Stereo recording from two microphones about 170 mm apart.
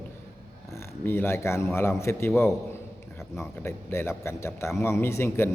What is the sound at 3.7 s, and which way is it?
A man's voice, 15° left (ahead or behind).